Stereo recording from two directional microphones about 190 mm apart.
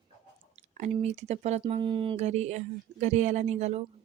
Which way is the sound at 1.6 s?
25° right (ahead or behind).